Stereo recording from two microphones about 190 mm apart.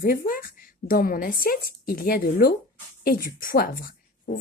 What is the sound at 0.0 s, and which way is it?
A woman's voice, 50° left (ahead or behind).